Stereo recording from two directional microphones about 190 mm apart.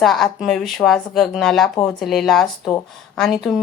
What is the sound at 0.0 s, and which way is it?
A woman's voice, centre (ahead or behind).